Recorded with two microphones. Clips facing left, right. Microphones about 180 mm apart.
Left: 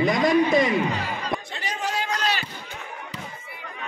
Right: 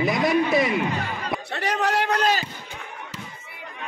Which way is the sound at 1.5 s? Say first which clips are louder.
Right 5 dB; 65° right (ahead or behind).